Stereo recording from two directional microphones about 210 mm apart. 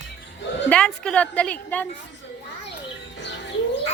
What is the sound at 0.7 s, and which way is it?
A woman's voice, 5° left (ahead or behind).